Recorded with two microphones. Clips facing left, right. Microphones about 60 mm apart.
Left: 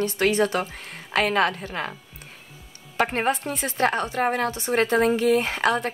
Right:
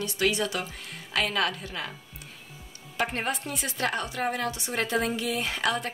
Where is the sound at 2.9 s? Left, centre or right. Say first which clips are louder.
Left 6 dB; left.